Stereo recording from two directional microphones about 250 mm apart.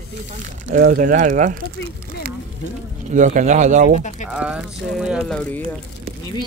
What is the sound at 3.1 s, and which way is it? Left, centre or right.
Speech, right.